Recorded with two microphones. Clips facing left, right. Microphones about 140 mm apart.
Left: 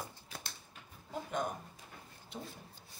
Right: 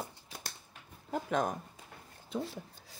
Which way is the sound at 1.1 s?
90° right.